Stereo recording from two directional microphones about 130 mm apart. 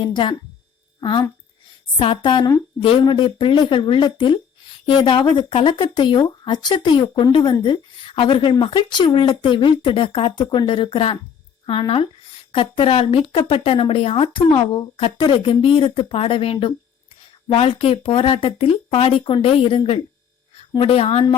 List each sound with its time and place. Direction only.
0.0 s speech: 40° left (ahead or behind)
2.0 s a woman's voice: 40° left (ahead or behind)